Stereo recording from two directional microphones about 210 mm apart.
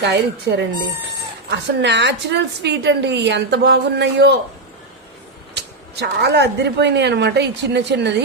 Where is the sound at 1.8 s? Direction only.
55° right (ahead or behind).